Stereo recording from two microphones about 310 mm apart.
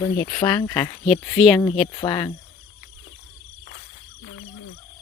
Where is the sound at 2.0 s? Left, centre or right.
Centre.